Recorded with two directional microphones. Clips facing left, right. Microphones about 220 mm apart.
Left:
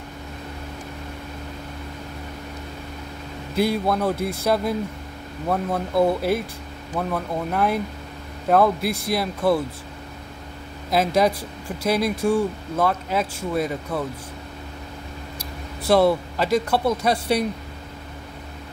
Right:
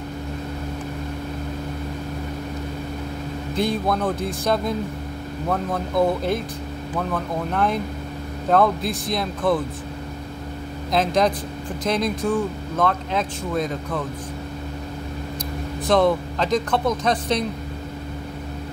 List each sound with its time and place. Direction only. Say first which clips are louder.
3.5 s speech: left 1 dB; 10° left (ahead or behind)
7.5 s speech: left 1 dB; 5° left (ahead or behind)
10.9 s speech: even; 5° left (ahead or behind)
15.9 s speech: left 1 dB; 10° left (ahead or behind)